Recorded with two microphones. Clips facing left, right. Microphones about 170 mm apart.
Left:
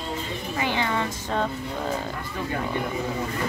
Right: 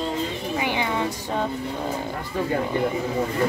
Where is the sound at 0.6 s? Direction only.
15° right (ahead or behind).